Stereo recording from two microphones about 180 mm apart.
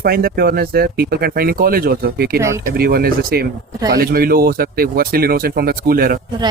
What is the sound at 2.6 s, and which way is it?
Speech, 55° right (ahead or behind).